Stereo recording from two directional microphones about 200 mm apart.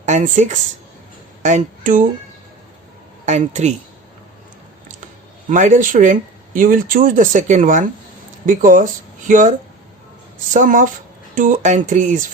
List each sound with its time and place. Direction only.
0.0 s speech: 35° right (ahead or behind)
3.2 s speech: 35° right (ahead or behind)
5.5 s speech: 40° right (ahead or behind)